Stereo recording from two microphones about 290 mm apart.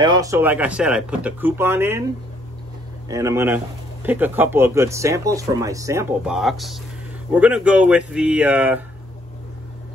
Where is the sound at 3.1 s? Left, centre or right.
Centre.